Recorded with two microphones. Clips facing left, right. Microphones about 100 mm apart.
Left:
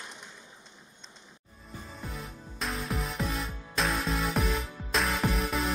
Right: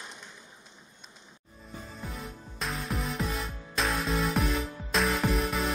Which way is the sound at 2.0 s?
Centre (ahead or behind).